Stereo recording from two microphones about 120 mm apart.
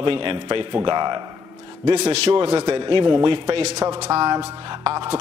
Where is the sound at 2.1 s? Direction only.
55° right (ahead or behind).